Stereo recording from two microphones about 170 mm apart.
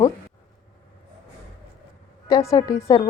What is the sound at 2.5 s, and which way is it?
Speech, 20° left (ahead or behind).